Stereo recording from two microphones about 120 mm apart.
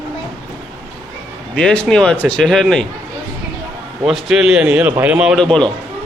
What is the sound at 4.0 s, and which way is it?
A man's voice, centre (ahead or behind).